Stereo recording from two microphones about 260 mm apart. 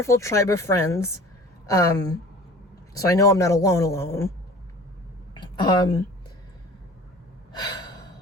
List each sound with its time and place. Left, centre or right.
0.0 s a man's voice: centre
5.4 s a sound: centre
7.6 s gasp: centre